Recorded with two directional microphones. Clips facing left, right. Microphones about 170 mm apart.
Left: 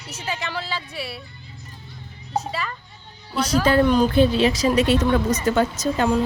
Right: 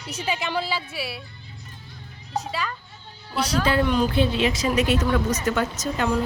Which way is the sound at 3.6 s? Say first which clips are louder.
Left 5 dB; 40° left (ahead or behind).